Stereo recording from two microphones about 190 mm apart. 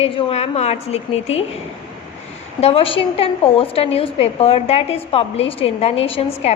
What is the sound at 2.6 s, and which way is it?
A woman's voice, 30° left (ahead or behind).